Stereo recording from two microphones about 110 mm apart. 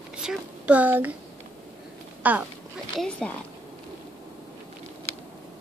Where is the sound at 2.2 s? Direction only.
15° right (ahead or behind).